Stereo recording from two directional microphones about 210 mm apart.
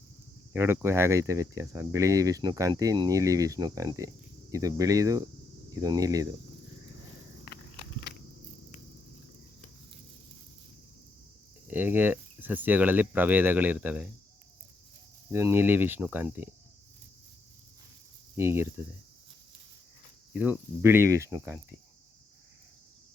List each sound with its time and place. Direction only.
0.5 s speech: 10° right (ahead or behind)
11.7 s speech: 10° right (ahead or behind)
15.3 s speech: 10° right (ahead or behind)
18.3 s speech: 10° right (ahead or behind)
20.4 s speech: 10° right (ahead or behind)